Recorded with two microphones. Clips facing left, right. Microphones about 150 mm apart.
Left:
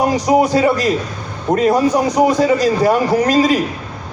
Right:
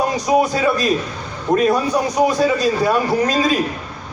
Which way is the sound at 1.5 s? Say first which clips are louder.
Left 3 dB; 20° left (ahead or behind).